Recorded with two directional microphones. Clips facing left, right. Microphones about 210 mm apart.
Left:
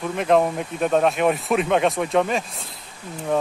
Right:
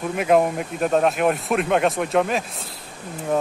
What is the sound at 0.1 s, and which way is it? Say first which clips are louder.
Speech: right 1 dB; 5° right (ahead or behind).